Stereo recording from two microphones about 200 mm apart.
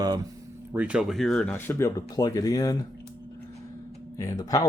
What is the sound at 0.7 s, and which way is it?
Speech, 5° right (ahead or behind).